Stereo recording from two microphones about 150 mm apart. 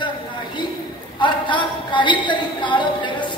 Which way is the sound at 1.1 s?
30° left (ahead or behind).